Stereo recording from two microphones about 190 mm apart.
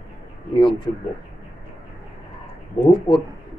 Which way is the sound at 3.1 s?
30° left (ahead or behind).